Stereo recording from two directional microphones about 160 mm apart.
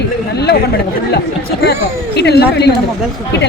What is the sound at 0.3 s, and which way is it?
Chatter, 90° left.